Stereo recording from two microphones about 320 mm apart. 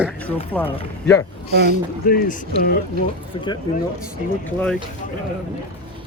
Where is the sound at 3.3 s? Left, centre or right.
Centre.